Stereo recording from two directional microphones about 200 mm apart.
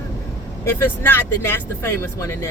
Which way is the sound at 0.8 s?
10° left (ahead or behind).